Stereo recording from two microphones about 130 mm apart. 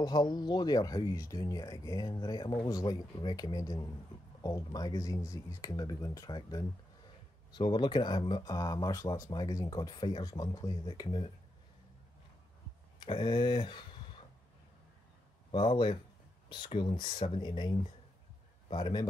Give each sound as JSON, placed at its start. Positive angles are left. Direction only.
{"t": 0.0, "sound": "speech", "side_deg": 35}
{"t": 11.1, "sound": "speech", "side_deg": 40}
{"t": 13.0, "sound": "speech", "side_deg": 35}
{"t": 15.5, "sound": "speech", "side_deg": 35}